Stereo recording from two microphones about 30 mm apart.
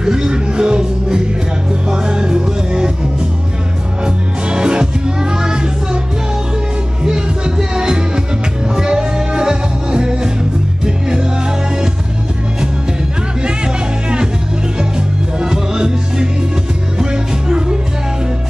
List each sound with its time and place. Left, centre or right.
0.0 s music: right
4.0 s music: right
7.0 s music: right
14.8 s music: right